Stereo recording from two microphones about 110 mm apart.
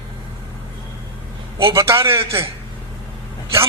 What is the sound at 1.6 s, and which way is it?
Speech, 25° right (ahead or behind).